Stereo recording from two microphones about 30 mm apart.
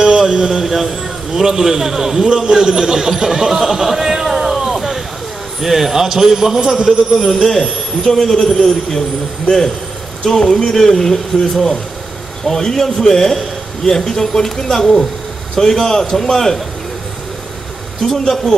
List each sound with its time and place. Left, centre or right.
0.0 s speech: right
0.7 s a man's voice: centre
2.2 s a man's voice: right
6.9 s speech: centre
7.6 s a man's voice: centre
10.5 s a man's voice: centre
18.0 s a man's voice: centre